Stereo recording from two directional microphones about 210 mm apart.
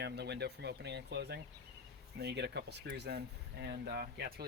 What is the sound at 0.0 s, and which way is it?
Speech, 50° right (ahead or behind).